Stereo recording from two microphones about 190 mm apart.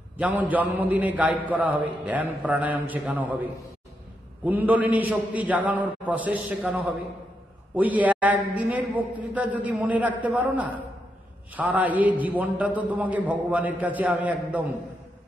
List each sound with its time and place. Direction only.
0.2 s a man's voice: 10° right (ahead or behind)
4.5 s a man's voice: 10° right (ahead or behind)